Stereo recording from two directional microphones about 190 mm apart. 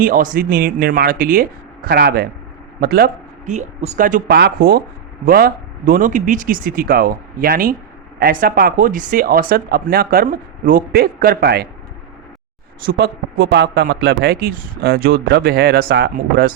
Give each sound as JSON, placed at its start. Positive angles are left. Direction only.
{"t": 0.0, "sound": "a man's voice", "side_deg": -45}
{"t": 3.5, "sound": "speech", "side_deg": -35}
{"t": 4.4, "sound": "speech", "side_deg": -60}
{"t": 12.8, "sound": "speech", "side_deg": -50}